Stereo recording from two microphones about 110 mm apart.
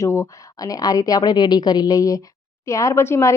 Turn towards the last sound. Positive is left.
turn(degrees=25)  # may be behind; listen again after turning